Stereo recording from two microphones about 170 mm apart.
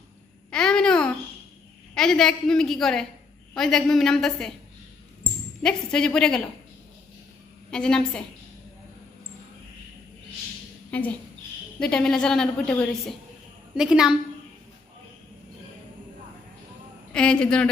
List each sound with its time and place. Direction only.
0.5 s babbling: 5° left (ahead or behind)
2.0 s a woman's voice: 5° left (ahead or behind)
5.6 s a woman's voice: 5° left (ahead or behind)
7.7 s a woman's voice: 5° left (ahead or behind)
10.9 s a woman's voice: 10° left (ahead or behind)
17.1 s a woman's voice: 5° left (ahead or behind)